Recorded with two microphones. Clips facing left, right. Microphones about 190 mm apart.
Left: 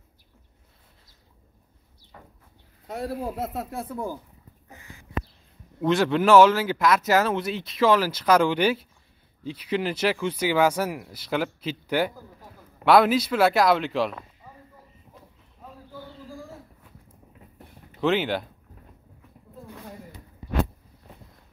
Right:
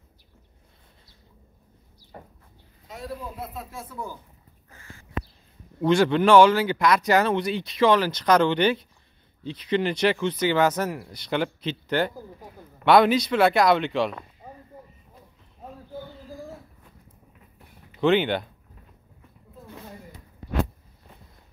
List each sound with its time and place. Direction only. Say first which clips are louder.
2.9 s speech: left 6 dB; 65° left (ahead or behind)
4.6 s a sound: left 1 dB; 15° left (ahead or behind)
5.8 s speech: right 2 dB; centre (ahead or behind)
18.0 s speech: right 3 dB; centre (ahead or behind)